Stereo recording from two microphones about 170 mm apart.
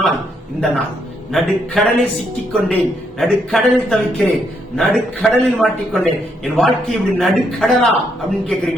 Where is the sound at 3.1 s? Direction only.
Centre (ahead or behind).